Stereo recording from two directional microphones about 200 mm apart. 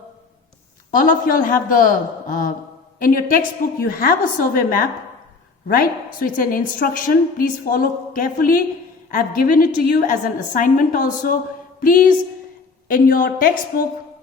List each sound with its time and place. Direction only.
0.9 s a woman's voice: 45° left (ahead or behind)